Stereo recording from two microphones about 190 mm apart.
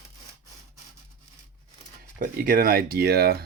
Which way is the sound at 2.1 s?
45° right (ahead or behind).